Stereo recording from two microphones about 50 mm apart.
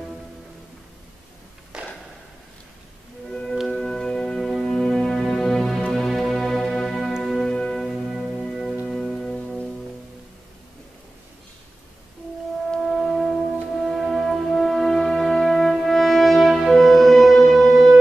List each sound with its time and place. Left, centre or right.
1.7 s a sound: centre
3.3 s music: centre
7.4 s music: centre
12.8 s music: centre